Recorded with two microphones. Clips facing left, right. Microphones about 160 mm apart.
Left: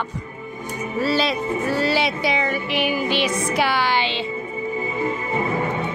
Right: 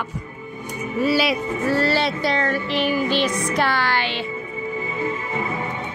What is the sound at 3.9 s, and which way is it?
Speech, 20° left (ahead or behind).